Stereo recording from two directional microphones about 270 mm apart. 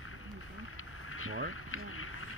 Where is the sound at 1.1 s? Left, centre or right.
Left.